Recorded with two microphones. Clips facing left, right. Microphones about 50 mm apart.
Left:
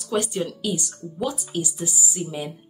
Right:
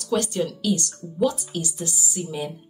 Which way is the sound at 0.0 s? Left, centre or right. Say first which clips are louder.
Right 1 dB; centre.